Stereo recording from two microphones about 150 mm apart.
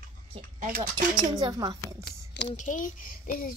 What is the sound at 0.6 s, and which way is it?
Speech, 70° right (ahead or behind).